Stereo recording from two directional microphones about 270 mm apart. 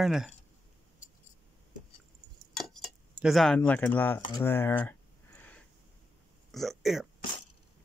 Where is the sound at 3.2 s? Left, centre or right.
Centre.